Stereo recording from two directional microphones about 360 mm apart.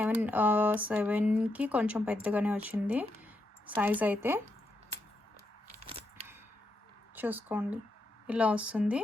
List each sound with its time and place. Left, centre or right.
0.0 s speech: centre
5.9 s a sound: centre
7.2 s speech: centre